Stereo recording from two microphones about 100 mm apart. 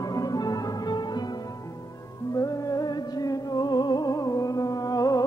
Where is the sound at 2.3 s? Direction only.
35° left (ahead or behind).